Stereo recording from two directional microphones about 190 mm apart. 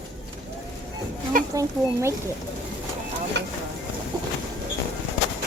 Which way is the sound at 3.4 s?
65° right (ahead or behind).